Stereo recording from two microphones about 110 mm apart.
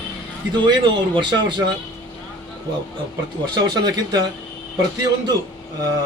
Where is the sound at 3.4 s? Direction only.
40° right (ahead or behind).